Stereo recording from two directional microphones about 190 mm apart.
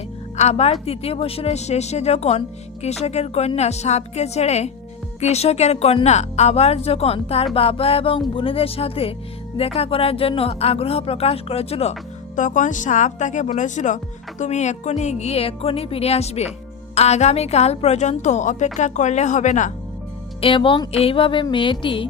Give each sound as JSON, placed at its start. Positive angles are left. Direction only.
{"t": 0.3, "sound": "speech", "side_deg": 35}
{"t": 20.4, "sound": "music", "side_deg": 25}